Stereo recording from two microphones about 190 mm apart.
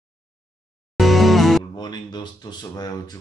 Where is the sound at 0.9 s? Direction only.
Centre (ahead or behind).